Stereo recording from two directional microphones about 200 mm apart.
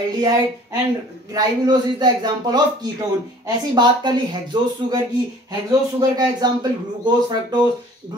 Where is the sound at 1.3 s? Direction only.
20° right (ahead or behind).